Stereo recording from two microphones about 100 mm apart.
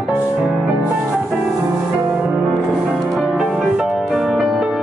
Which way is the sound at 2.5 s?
5° left (ahead or behind).